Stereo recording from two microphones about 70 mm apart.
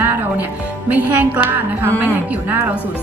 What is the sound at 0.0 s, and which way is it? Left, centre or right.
Music, right.